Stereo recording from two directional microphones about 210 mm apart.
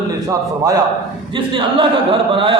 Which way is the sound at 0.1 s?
15° right (ahead or behind).